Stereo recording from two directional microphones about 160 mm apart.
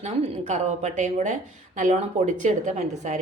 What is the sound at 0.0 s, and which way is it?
A woman's voice, 45° right (ahead or behind).